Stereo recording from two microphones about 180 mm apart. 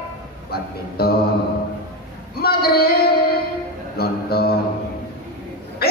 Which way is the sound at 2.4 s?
60° left (ahead or behind).